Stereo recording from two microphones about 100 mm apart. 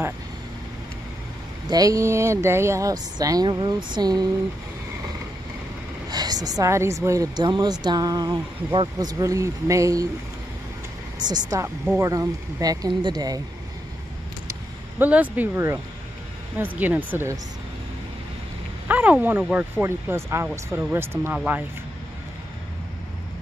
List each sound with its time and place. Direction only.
1.7 s speech: 35° right (ahead or behind)
6.0 s speech: 40° right (ahead or behind)
7.3 s speech: 45° right (ahead or behind)
11.1 s speech: 45° right (ahead or behind)
15.0 s speech: 15° right (ahead or behind)
18.9 s speech: 15° right (ahead or behind)